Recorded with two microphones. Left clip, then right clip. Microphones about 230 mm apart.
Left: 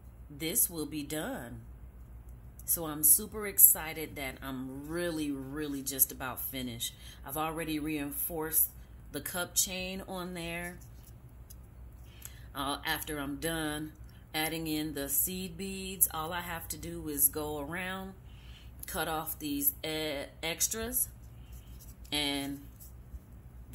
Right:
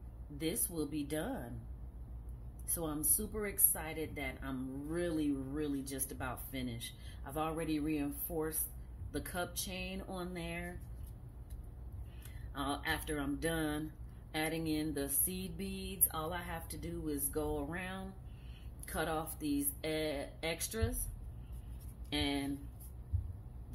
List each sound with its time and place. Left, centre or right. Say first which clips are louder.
0.4 s speech: left 3 dB; centre
2.6 s a woman's voice: left 4 dB; centre
12.5 s a woman's voice: left 3 dB; centre
22.1 s a woman's voice: left 4 dB; centre